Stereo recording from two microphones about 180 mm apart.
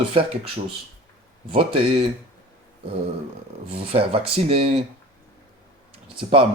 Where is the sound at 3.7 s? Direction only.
30° right (ahead or behind).